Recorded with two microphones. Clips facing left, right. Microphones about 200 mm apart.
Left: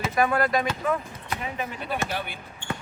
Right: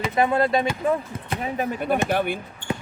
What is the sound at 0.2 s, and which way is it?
Speech, 25° right (ahead or behind).